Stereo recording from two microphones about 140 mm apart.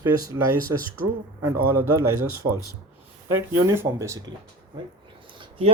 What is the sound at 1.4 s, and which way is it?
Speech, 20° right (ahead or behind).